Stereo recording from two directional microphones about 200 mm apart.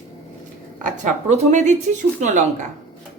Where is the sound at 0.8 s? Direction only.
40° right (ahead or behind).